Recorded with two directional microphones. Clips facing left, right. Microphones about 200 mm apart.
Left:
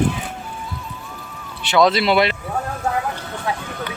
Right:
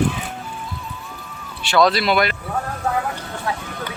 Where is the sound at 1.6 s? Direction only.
20° left (ahead or behind).